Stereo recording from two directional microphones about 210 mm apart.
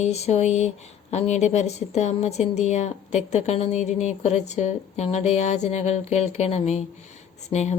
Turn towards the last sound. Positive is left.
turn(degrees=30)  # may be behind; listen again after turning